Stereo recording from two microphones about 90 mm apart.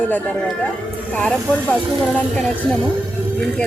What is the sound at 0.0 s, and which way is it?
Speech, 20° left (ahead or behind).